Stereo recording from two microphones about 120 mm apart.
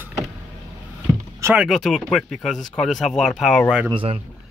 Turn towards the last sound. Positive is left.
turn(degrees=-45)  # may be behind; listen again after turning